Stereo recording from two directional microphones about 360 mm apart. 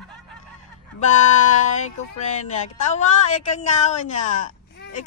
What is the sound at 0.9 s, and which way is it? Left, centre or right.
Speech, centre.